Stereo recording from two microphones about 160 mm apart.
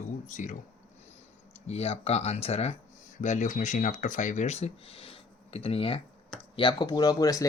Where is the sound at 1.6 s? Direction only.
40° left (ahead or behind).